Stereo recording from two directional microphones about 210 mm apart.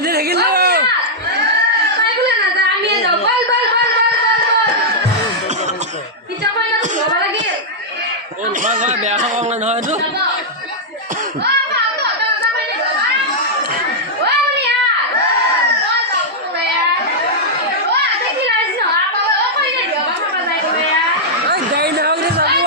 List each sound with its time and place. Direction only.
0.1 s a sound: 50° right (ahead or behind)
8.6 s a man's voice: 40° right (ahead or behind)
21.5 s chatter: 50° right (ahead or behind)